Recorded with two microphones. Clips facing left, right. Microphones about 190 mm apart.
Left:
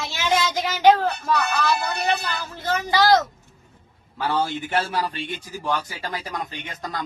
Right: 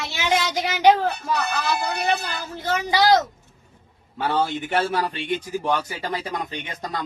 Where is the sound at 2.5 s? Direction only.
15° right (ahead or behind).